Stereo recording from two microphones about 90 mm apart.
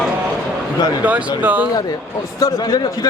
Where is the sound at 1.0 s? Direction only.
15° right (ahead or behind).